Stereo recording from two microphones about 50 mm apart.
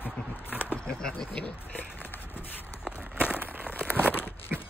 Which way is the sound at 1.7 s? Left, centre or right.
Left.